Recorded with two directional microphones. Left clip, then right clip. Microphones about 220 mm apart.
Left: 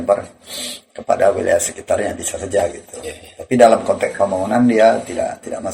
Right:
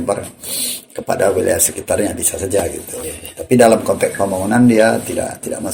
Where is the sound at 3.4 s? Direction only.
40° right (ahead or behind).